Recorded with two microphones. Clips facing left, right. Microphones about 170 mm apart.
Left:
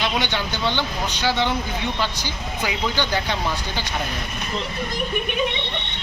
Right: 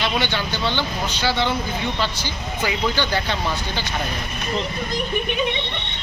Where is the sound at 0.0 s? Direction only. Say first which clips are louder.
Right 1 dB; 15° left (ahead or behind).